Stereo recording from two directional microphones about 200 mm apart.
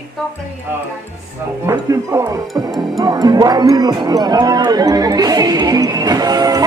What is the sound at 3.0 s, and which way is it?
Music, 20° right (ahead or behind).